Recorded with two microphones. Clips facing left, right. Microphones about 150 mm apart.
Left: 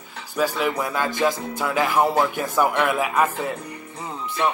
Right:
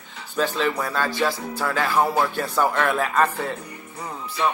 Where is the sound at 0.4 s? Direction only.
10° left (ahead or behind).